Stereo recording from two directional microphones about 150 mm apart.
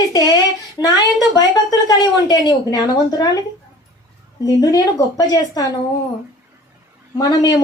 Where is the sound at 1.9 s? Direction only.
25° left (ahead or behind).